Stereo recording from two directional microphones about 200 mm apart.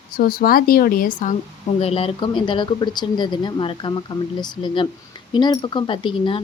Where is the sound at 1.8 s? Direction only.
30° left (ahead or behind).